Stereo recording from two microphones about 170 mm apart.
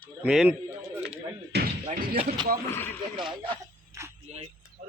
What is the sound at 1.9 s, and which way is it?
Speech, 55° right (ahead or behind).